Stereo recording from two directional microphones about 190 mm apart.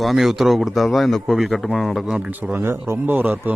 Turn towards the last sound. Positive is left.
turn(degrees=-10)  # may be behind; listen again after turning